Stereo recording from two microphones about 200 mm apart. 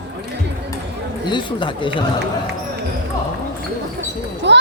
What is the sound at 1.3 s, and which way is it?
Speech, 25° left (ahead or behind).